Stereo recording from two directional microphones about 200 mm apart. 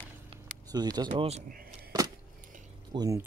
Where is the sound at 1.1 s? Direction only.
35° right (ahead or behind).